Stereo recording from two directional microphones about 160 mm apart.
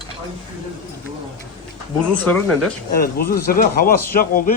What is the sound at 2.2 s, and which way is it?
Speech, 5° left (ahead or behind).